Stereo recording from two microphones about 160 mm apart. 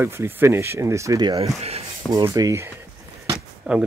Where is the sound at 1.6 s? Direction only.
40° right (ahead or behind).